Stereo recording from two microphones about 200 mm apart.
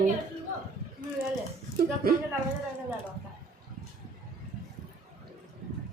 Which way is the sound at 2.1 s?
45° right (ahead or behind).